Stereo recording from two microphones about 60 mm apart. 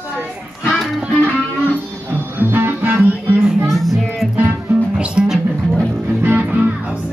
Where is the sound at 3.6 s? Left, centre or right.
Centre.